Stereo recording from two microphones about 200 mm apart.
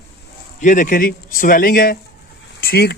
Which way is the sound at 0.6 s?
40° left (ahead or behind).